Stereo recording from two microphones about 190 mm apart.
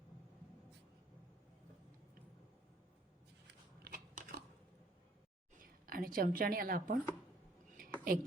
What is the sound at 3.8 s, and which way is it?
Biting, 50° right (ahead or behind).